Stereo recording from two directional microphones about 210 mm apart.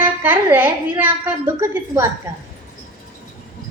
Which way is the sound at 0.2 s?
10° right (ahead or behind).